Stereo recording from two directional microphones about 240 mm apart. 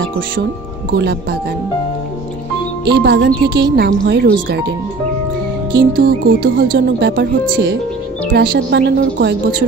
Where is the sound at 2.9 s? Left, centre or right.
Right.